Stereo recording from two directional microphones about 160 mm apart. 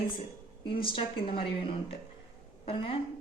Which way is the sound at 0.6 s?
30° left (ahead or behind).